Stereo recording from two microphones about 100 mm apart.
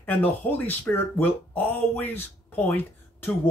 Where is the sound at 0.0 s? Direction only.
15° left (ahead or behind).